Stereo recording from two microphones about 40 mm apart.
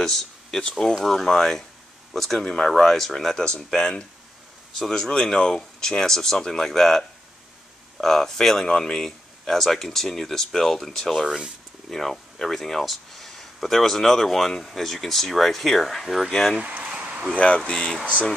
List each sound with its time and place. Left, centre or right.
0.0 s speech: centre
2.4 s speech: centre
3.4 s speech: centre
4.9 s speech: centre
8.6 s speech: centre
16.6 s a sound: right
17.6 s speech: left